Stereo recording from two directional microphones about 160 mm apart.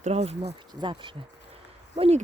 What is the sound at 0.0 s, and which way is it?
Speech, 40° right (ahead or behind).